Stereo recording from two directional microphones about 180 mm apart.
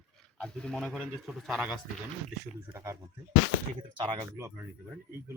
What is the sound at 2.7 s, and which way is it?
Speech, 15° right (ahead or behind).